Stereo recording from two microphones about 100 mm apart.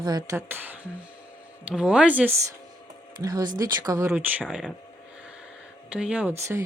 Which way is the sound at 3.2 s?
40° right (ahead or behind).